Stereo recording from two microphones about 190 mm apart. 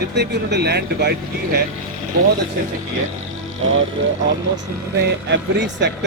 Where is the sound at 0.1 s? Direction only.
60° right (ahead or behind).